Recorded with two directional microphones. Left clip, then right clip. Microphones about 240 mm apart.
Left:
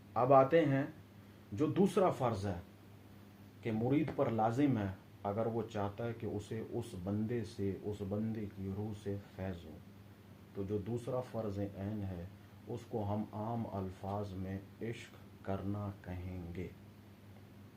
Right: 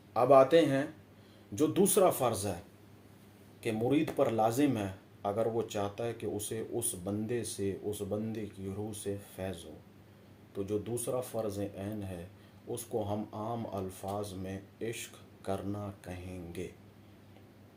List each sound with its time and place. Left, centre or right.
0.1 s speech: right
3.6 s speech: right
10.7 s speech: right